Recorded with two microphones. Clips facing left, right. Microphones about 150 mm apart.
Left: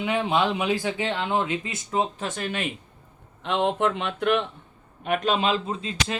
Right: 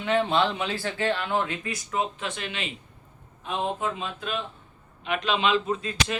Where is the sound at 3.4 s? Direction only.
75° left (ahead or behind).